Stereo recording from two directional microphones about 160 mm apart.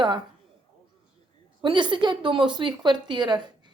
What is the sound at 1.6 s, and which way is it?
A woman's voice, 30° right (ahead or behind).